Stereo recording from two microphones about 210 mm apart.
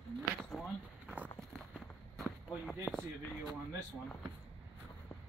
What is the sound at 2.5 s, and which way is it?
Basketball bounce, 5° left (ahead or behind).